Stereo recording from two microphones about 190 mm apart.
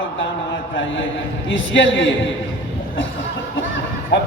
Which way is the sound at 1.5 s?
85° left.